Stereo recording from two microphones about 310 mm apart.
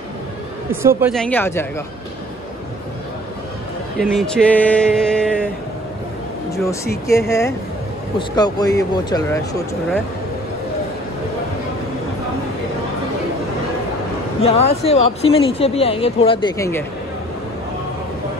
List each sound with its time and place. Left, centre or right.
0.8 s speech: centre
4.0 s speech: centre
6.5 s speech: centre
14.4 s speech: centre